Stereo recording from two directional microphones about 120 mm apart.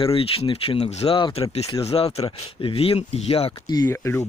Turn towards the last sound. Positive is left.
turn(degrees=25)  # may be behind; listen again after turning